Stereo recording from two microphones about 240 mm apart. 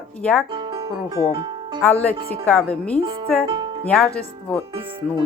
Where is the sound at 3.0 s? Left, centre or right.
Centre.